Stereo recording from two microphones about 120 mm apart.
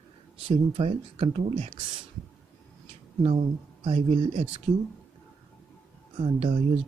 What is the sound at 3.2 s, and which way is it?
Speech, 50° right (ahead or behind).